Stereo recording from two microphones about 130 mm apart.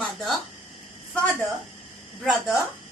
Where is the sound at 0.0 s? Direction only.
Centre (ahead or behind).